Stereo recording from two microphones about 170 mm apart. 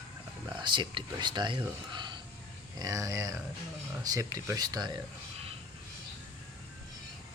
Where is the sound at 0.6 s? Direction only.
30° right (ahead or behind).